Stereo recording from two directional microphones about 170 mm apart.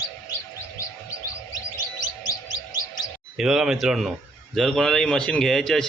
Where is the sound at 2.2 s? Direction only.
25° left (ahead or behind).